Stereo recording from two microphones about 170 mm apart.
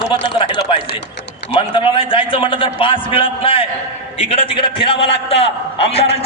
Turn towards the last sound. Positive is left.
turn(degrees=35)  # may be behind; listen again after turning